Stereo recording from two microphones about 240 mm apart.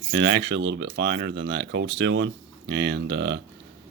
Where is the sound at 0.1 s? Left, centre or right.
Right.